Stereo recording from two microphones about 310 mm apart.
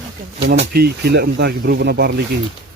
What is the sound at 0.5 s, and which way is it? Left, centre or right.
Speech, right.